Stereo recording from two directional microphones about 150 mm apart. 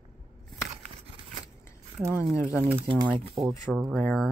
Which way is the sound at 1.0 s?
40° right (ahead or behind).